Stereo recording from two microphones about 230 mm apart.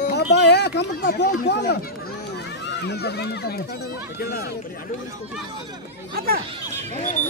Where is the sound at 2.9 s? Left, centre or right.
Left.